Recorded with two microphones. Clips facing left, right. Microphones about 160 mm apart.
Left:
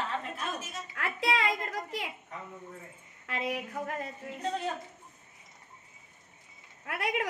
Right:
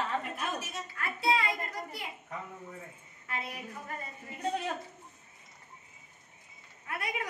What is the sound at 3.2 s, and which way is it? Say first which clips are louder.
Speech: left 6 dB; 90° left.